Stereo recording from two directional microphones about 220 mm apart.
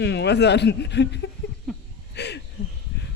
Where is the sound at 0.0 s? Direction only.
50° left (ahead or behind).